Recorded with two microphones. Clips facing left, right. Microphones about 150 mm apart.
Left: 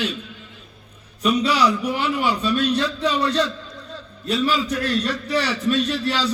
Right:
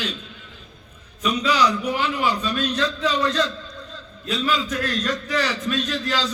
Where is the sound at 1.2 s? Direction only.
30° left (ahead or behind).